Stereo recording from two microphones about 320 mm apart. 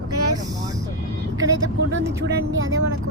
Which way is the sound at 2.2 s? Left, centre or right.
Right.